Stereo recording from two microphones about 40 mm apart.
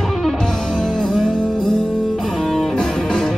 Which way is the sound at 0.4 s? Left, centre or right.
Centre.